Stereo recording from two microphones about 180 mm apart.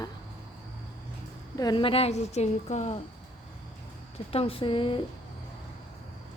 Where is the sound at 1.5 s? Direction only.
20° left (ahead or behind); by 3.0 s 40° left (ahead or behind).